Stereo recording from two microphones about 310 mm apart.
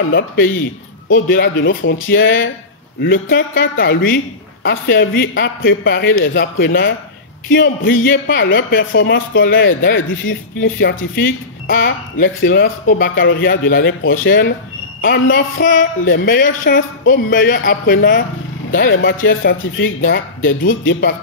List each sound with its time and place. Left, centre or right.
0.1 s speech: left
3.0 s speech: left
11.7 s a woman's voice: left
18.9 s speech: left